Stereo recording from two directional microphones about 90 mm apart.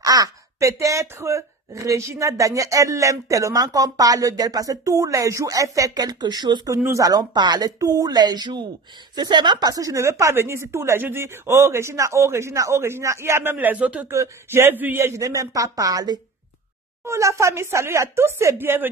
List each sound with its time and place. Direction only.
0.0 s speech: 45° right (ahead or behind); by 14.0 s 15° right (ahead or behind)
14.0 s speech: 30° right (ahead or behind)
17.0 s speech: 30° right (ahead or behind)